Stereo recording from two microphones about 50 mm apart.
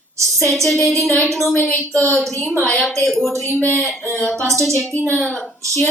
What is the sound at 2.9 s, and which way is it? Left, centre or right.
Speech, centre.